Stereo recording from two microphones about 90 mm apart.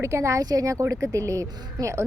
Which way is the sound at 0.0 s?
30° right (ahead or behind).